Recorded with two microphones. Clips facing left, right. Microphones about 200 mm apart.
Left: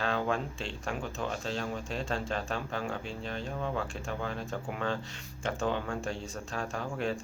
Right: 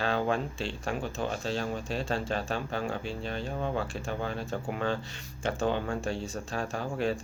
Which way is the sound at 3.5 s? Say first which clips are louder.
Right 2 dB; 30° right (ahead or behind).